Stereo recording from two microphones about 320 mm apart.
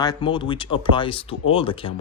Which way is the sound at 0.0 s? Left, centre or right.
Centre.